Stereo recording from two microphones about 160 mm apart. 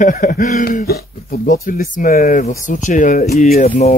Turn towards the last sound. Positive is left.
turn(degrees=45)  # may be behind; listen again after turning